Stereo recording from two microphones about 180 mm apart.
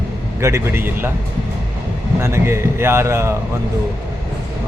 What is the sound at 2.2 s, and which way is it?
Speech, 15° right (ahead or behind).